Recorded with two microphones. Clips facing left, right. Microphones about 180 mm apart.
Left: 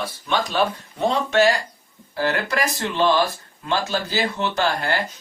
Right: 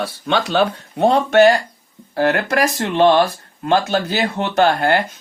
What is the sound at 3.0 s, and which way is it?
Speech, 60° right (ahead or behind).